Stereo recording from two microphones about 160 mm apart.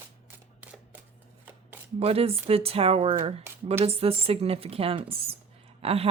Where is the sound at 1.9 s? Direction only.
40° right (ahead or behind).